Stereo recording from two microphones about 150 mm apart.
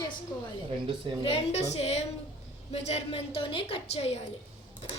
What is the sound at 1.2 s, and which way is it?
A woman's voice, 40° left (ahead or behind).